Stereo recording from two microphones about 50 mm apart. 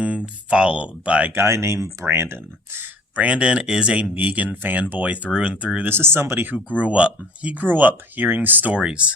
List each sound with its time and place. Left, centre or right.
0.0 s speech: right
1.3 s speech: right
2.1 s speech: right
3.2 s speech: right
4.1 s speech: right
5.9 s speech: right
6.7 s speech: right
8.8 s speech: centre